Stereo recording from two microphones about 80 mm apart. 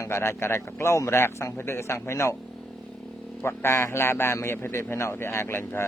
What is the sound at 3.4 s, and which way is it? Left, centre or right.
A man's voice, left.